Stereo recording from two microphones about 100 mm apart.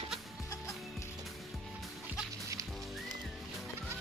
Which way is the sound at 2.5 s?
35° right (ahead or behind).